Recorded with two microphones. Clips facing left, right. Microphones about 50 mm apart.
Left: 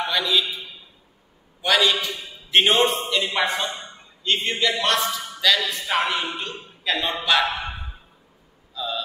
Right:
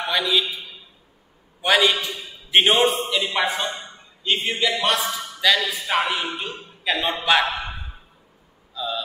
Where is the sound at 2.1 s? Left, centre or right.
Centre.